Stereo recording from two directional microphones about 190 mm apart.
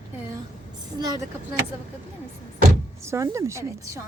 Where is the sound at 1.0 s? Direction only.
20° right (ahead or behind).